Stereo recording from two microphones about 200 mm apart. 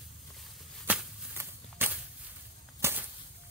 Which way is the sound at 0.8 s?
10° right (ahead or behind).